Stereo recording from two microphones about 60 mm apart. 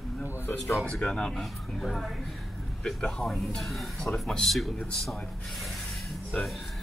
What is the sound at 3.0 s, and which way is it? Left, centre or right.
Speech, centre.